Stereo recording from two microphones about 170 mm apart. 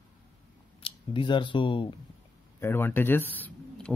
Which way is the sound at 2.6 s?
15° left (ahead or behind).